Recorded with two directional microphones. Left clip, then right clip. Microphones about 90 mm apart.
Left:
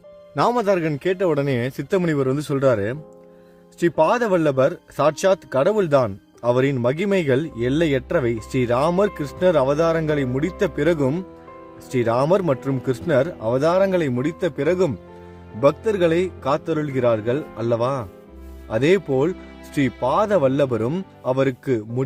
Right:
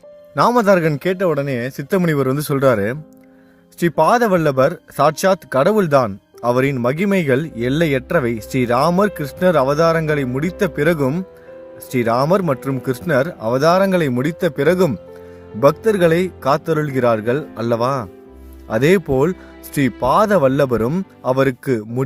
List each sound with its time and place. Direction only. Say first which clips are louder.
0.5 s speech: right 6 dB; 55° right (ahead or behind)
1.3 s speech: right 2 dB; centre (ahead or behind)
1.9 s speech: right 3 dB; 25° right (ahead or behind)
5.6 s speech: right 3 dB; 35° right (ahead or behind)
5.9 s speech: right 3 dB; 20° right (ahead or behind)